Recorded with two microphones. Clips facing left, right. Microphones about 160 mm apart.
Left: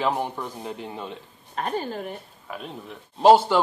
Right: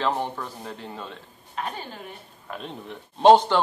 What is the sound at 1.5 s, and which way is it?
Speech, 45° left (ahead or behind).